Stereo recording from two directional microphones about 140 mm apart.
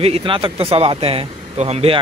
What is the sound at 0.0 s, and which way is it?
Speech, 40° right (ahead or behind).